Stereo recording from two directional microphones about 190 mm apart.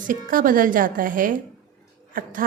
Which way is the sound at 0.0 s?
45° right (ahead or behind).